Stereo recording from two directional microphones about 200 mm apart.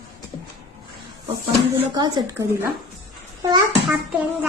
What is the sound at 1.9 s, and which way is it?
Speech, 20° right (ahead or behind).